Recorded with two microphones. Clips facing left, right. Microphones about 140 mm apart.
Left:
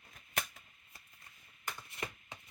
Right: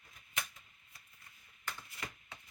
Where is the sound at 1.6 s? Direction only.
15° left (ahead or behind).